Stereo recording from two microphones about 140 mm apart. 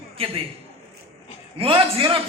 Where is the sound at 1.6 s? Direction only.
40° right (ahead or behind).